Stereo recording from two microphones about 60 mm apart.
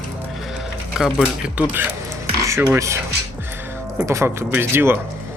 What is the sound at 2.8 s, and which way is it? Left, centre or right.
Speech, right.